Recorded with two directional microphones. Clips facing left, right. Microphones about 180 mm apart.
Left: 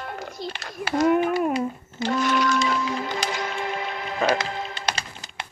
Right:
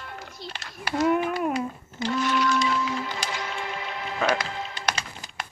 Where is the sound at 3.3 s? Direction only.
45° left (ahead or behind).